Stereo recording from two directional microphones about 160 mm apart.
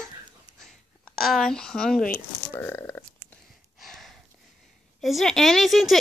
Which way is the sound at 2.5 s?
15° left (ahead or behind).